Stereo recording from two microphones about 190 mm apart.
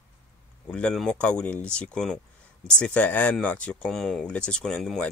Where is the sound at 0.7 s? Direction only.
5° left (ahead or behind).